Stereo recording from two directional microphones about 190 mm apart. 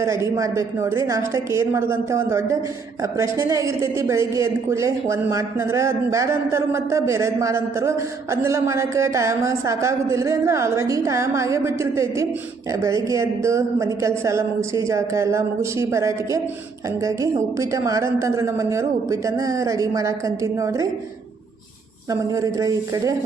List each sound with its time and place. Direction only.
0.0 s a woman's voice: 15° right (ahead or behind)
17.6 s a woman's voice: 15° right (ahead or behind)
22.1 s a woman's voice: 15° right (ahead or behind)